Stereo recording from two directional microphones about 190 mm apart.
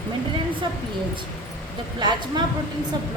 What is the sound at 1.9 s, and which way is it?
Speech, 20° right (ahead or behind).